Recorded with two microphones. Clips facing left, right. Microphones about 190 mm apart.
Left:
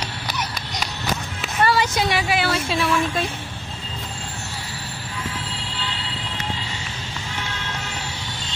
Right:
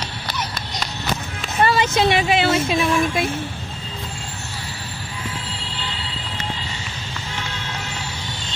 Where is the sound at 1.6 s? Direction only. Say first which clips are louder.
Right 3 dB; 20° right (ahead or behind).